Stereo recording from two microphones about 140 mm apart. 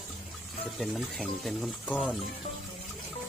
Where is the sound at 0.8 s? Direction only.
Centre (ahead or behind).